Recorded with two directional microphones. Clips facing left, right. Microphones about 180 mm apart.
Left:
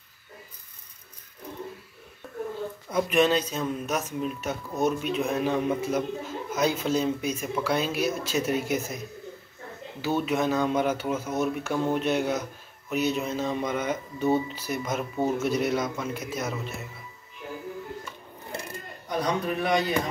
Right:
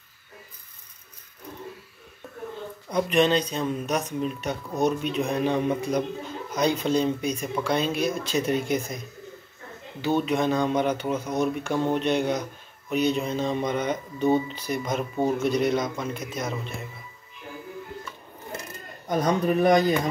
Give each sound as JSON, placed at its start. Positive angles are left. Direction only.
{"t": 2.9, "sound": "speech", "side_deg": 5}
{"t": 10.0, "sound": "speech", "side_deg": 5}
{"t": 19.0, "sound": "speech", "side_deg": -45}